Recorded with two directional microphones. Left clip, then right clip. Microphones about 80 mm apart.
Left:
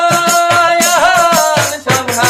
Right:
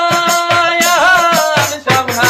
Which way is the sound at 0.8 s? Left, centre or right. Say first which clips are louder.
Even; centre.